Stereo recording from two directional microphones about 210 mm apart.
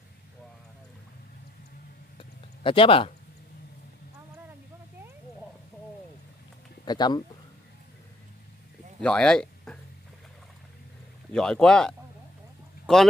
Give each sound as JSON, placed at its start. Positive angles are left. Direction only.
{"t": 2.1, "sound": "a sound", "side_deg": 25}
{"t": 6.8, "sound": "speech", "side_deg": 20}
{"t": 9.0, "sound": "speech", "side_deg": 5}
{"t": 11.3, "sound": "speech", "side_deg": 5}